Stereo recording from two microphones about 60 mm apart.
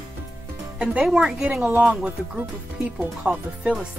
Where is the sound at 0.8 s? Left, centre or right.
Centre.